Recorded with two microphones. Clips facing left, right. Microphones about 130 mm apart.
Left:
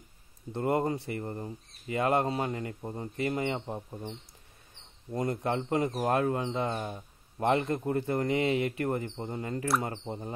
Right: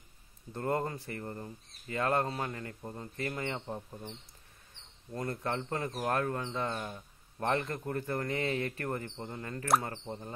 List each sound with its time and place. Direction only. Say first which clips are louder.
0.5 s speech: left 5 dB; 15° left (ahead or behind)